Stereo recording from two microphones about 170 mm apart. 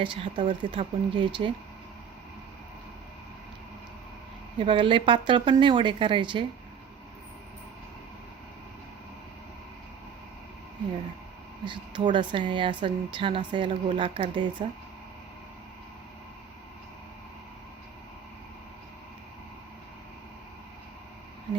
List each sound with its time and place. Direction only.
0.0 s speech: 30° right (ahead or behind)
4.5 s speech: 30° right (ahead or behind)
11.6 s speech: 25° right (ahead or behind)